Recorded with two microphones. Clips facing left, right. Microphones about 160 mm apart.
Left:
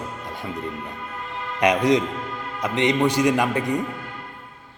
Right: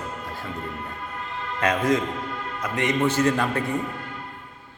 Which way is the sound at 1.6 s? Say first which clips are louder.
Left 4 dB; 15° left (ahead or behind).